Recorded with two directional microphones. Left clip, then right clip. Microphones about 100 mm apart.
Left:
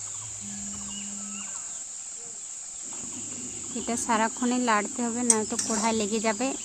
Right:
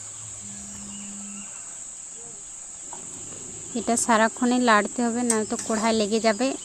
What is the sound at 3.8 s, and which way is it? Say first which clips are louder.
Speech: right 6 dB; 45° right (ahead or behind).